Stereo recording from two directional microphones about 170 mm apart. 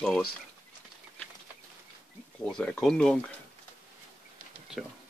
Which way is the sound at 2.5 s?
5° left (ahead or behind).